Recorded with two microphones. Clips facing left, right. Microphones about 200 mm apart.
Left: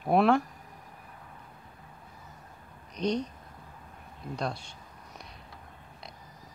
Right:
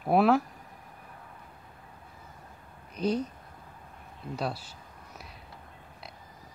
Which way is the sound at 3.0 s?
5° right (ahead or behind).